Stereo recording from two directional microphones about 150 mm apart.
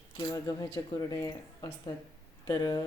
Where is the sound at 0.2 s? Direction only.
25° left (ahead or behind).